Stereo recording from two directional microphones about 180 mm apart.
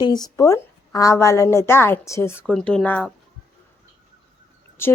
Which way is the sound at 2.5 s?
5° left (ahead or behind).